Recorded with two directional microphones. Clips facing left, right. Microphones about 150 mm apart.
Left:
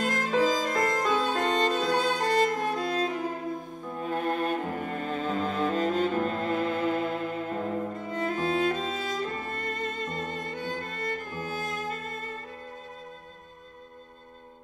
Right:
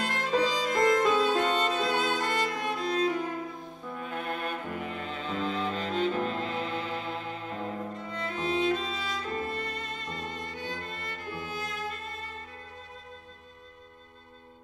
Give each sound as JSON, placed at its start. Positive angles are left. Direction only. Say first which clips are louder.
{"t": 0.0, "sound": "violin", "louder": "left 2 dB", "side_deg": 45}
{"t": 4.0, "sound": "music", "louder": "left 6 dB", "side_deg": 40}